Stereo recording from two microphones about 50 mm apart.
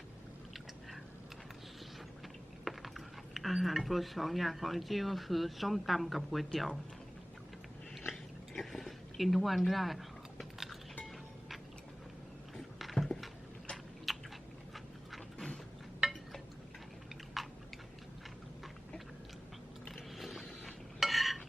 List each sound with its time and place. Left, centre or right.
2.6 s speech: centre
8.1 s chewing: centre
11.0 s music: centre
12.8 s a sound: centre
14.1 s chewing: centre
17.4 s chewing: centre
20.1 s a sound: centre
21.0 s stir: centre